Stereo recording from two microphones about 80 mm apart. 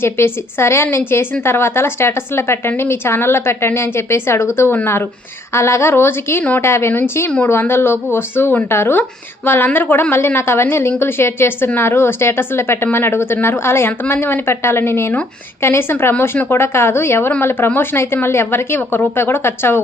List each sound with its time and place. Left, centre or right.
0.0 s a woman's voice: left